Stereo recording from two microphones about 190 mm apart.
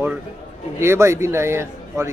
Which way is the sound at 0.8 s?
15° right (ahead or behind).